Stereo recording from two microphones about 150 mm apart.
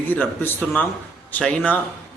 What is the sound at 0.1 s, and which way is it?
A man's voice, 10° left (ahead or behind).